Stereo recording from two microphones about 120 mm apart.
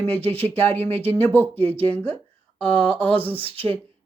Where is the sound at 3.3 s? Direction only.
50° right (ahead or behind).